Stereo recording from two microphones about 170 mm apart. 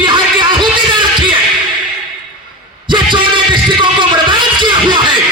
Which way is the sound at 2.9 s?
30° right (ahead or behind).